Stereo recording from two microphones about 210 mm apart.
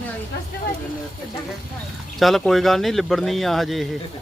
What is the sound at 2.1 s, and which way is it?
Speech, centre (ahead or behind).